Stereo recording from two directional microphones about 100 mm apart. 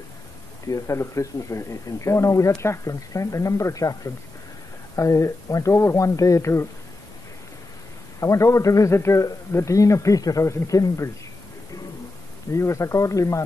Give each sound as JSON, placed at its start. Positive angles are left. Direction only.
{"t": 0.7, "sound": "speech", "side_deg": 30}
{"t": 8.2, "sound": "speech", "side_deg": 30}
{"t": 12.5, "sound": "speech", "side_deg": 30}